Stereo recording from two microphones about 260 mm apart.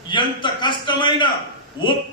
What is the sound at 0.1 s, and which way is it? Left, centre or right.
A man's voice, centre.